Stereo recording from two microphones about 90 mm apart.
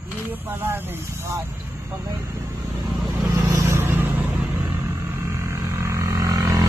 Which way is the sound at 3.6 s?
30° right (ahead or behind).